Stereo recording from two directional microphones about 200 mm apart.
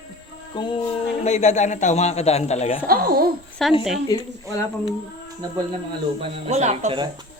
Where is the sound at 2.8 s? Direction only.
50° right (ahead or behind).